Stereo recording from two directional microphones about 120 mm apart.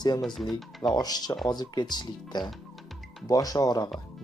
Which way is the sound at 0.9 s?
35° left (ahead or behind).